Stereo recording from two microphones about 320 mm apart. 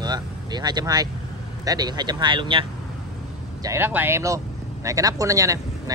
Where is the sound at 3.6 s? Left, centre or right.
Centre.